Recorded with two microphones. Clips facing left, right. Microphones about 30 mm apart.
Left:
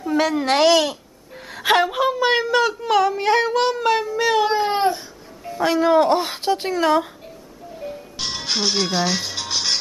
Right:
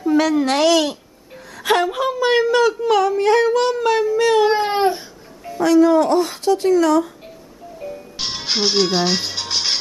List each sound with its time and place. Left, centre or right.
0.0 s a woman's voice: centre
4.5 s music: centre
5.6 s speech: left
7.8 s music: centre
8.2 s music: centre